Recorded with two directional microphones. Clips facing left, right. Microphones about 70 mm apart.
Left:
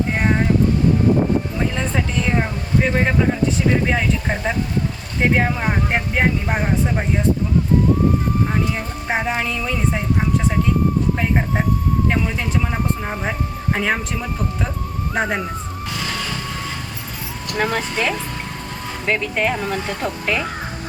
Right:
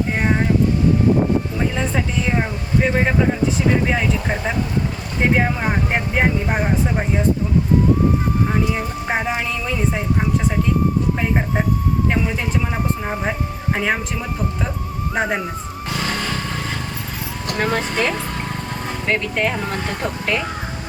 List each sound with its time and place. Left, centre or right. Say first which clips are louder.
0.2 s a sound: even; centre
1.7 s speech: even; centre
8.5 s speech: right 2 dB; centre
11.2 s speech: even; centre
12.7 s speech: even; centre
15.1 s speech: even; centre
16.0 s vehicle: right 3 dB; right
17.6 s speech: even; centre
19.0 s speech: left 1 dB; centre